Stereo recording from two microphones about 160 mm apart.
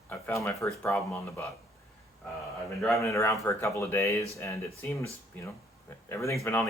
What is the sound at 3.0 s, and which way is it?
Speech, 20° left (ahead or behind).